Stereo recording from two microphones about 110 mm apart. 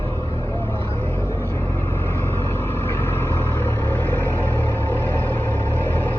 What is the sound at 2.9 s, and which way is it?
Vehicle, 20° left (ahead or behind).